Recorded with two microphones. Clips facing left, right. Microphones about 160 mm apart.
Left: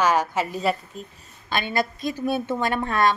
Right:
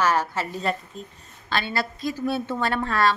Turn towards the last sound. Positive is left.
turn(degrees=15)  # may be behind; listen again after turning